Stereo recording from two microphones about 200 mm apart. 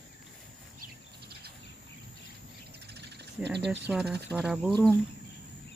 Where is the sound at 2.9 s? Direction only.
60° right (ahead or behind).